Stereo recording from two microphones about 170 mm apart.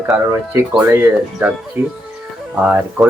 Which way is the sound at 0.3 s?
15° right (ahead or behind).